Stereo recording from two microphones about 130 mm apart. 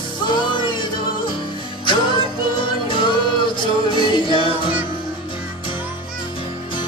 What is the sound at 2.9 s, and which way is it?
Music, 40° left (ahead or behind).